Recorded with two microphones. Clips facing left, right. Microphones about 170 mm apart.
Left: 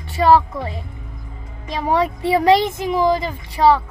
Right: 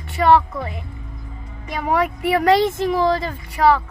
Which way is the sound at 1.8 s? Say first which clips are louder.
Left 1 dB; 30° left (ahead or behind).